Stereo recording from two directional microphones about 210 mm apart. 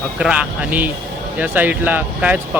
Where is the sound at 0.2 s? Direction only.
5° right (ahead or behind).